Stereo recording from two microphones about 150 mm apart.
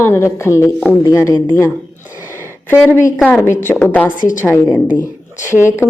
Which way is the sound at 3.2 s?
15° left (ahead or behind).